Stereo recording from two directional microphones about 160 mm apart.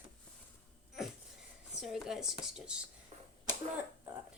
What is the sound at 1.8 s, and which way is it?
Speech, 5° right (ahead or behind).